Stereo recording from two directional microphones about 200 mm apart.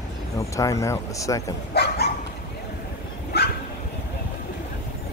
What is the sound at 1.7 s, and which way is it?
Dog, 55° left (ahead or behind).